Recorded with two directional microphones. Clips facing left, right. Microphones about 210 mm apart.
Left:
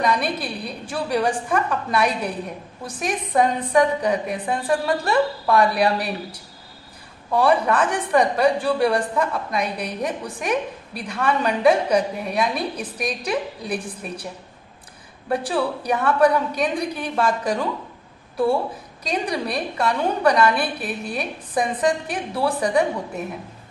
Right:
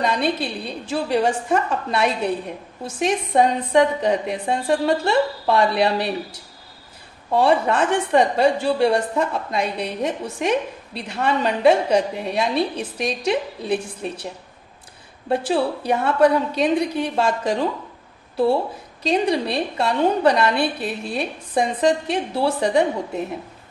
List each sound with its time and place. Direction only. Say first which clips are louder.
0.0 s a woman's voice: right 1 dB; 25° right (ahead or behind)
7.2 s a woman's voice: right 1 dB; 25° right (ahead or behind)
15.2 s a woman's voice: right 2 dB; 25° right (ahead or behind)